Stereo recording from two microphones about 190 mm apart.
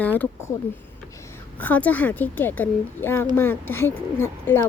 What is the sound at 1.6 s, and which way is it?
Speech, 10° left (ahead or behind).